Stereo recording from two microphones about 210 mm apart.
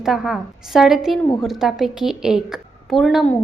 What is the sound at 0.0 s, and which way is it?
A woman's voice, centre (ahead or behind).